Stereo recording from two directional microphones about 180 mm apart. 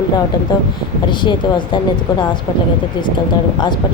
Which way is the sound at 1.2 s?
25° left (ahead or behind).